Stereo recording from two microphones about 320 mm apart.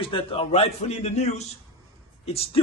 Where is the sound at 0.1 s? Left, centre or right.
Centre.